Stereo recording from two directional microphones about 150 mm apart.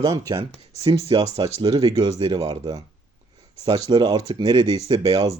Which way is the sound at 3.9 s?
30° right (ahead or behind).